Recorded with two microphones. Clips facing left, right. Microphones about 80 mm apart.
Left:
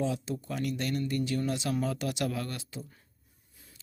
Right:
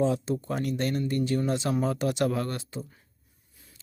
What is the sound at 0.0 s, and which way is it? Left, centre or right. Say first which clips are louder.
Speech: right 6 dB; right.